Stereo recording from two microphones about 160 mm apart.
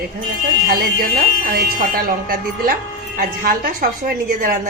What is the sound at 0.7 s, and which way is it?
A woman's voice, 70° right (ahead or behind).